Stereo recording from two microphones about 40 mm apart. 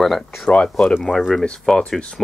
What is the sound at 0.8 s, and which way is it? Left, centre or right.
Speech, left.